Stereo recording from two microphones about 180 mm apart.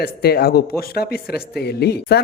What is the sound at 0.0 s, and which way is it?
Speech, 60° left (ahead or behind).